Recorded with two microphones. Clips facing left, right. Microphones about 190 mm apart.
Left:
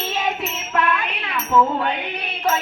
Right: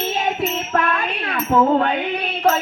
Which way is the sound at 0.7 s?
50° right (ahead or behind).